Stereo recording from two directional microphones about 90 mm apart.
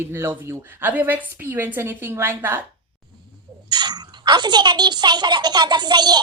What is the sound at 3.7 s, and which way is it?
A child's voice, 50° right (ahead or behind).